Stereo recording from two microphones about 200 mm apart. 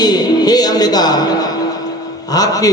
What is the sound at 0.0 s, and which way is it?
A man's voice, 20° left (ahead or behind).